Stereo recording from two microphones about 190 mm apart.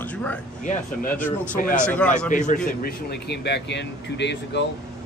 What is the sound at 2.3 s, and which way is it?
Speech, 40° left (ahead or behind).